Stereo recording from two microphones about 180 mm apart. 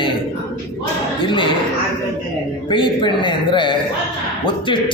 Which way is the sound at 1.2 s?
25° left (ahead or behind).